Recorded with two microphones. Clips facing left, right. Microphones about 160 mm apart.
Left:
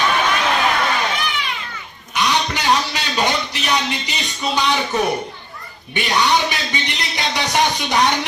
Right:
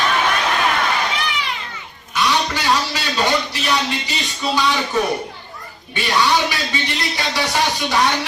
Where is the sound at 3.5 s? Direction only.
20° left (ahead or behind).